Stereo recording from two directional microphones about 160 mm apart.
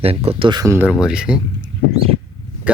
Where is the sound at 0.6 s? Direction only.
15° right (ahead or behind).